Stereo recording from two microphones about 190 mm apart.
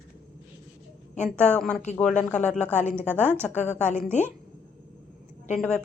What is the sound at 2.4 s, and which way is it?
Speech, 40° left (ahead or behind).